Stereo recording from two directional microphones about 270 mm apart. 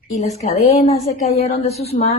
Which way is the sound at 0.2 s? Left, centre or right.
Left.